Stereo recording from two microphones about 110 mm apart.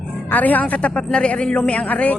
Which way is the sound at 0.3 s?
15° left (ahead or behind).